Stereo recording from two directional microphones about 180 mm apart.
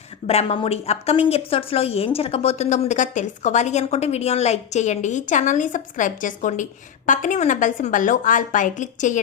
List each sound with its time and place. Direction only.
0.3 s a woman's voice: 35° left (ahead or behind)